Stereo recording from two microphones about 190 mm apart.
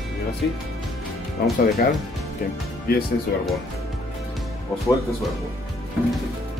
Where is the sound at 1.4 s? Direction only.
55° left (ahead or behind).